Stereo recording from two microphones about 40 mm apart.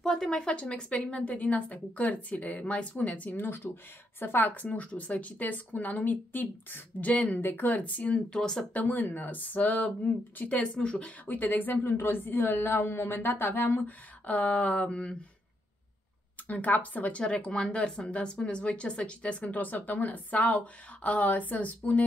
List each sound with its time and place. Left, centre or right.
0.0 s speech: centre
0.5 s speech: left
3.3 s speech: left
4.2 s a woman's voice: left
8.4 s speech: centre
8.7 s a woman's voice: left
11.2 s speech: left
13.8 s speech: left
16.4 s speech: left
17.2 s speech: left
19.4 s speech: left